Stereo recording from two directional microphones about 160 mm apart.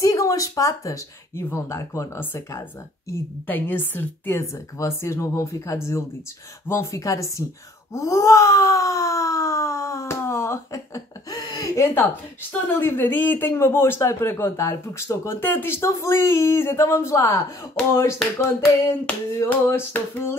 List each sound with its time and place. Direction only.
0.0 s wail: 20° left (ahead or behind)
3.1 s speech: 10° left (ahead or behind)
6.7 s wail: 20° left (ahead or behind)
12.6 s speech: 15° left (ahead or behind)